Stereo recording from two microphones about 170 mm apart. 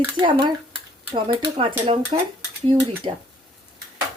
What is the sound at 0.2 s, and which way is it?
Speech, 30° right (ahead or behind).